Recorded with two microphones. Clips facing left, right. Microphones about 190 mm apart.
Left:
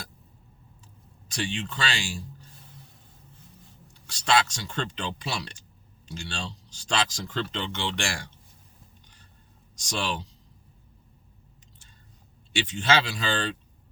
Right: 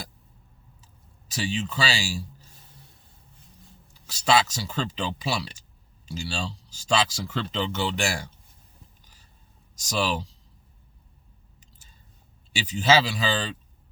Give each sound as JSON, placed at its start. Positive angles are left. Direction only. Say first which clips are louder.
{"t": 1.3, "sound": "speech", "louder": "right 2 dB", "side_deg": -5}
{"t": 4.0, "sound": "speech", "louder": "right 2 dB", "side_deg": -5}
{"t": 9.7, "sound": "speech", "louder": "right 4 dB", "side_deg": -5}
{"t": 12.5, "sound": "speech", "louder": "right 3 dB", "side_deg": -5}